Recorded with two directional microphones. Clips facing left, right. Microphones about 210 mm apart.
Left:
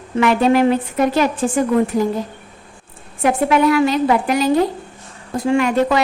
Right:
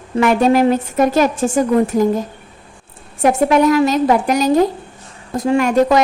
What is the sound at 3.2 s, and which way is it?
A woman's voice, 45° right (ahead or behind).